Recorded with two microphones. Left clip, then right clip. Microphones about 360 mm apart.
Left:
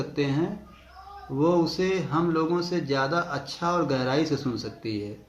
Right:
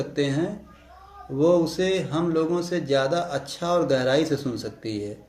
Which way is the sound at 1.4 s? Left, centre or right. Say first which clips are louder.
Right 3 dB; centre.